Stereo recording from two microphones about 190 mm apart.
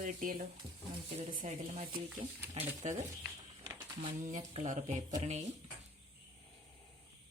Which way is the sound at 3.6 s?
20° right (ahead or behind).